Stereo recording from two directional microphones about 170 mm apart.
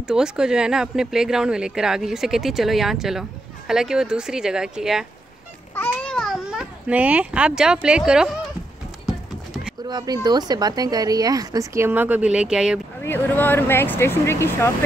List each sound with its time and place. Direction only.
0.0 s speech: 5° right (ahead or behind)
5.8 s babbling: 5° left (ahead or behind)
9.0 s clip-clop: 5° right (ahead or behind)
9.8 s a woman's voice: 25° right (ahead or behind); by 12.8 s 5° right (ahead or behind)
13.0 s speech: 10° left (ahead or behind)